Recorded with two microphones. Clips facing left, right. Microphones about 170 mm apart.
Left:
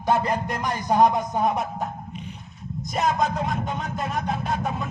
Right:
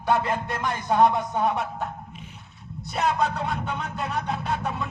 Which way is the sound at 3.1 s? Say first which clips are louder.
Left 1 dB; 40° left (ahead or behind).